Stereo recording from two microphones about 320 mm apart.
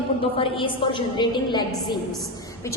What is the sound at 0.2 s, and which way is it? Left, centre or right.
A woman's voice, centre.